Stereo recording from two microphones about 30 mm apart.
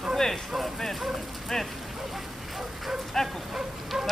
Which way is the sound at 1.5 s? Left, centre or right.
Centre.